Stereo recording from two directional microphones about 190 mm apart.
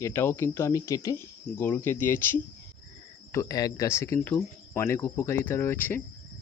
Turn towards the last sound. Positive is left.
turn(degrees=10)  # may be behind; listen again after turning